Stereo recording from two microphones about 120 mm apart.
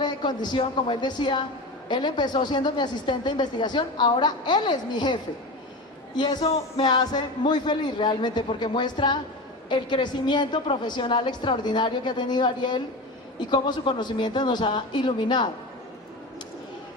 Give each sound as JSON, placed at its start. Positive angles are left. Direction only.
{"t": 0.0, "sound": "speech", "side_deg": 40}
{"t": 6.4, "sound": "music", "side_deg": 55}
{"t": 6.8, "sound": "speech", "side_deg": 35}